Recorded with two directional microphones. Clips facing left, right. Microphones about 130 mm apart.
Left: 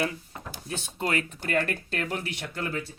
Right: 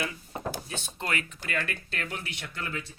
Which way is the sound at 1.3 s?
50° left (ahead or behind).